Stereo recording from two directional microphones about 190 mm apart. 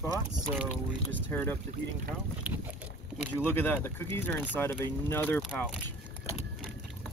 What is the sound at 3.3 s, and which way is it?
Speech, 10° left (ahead or behind).